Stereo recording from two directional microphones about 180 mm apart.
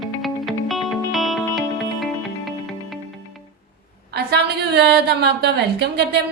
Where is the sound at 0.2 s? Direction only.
Centre (ahead or behind).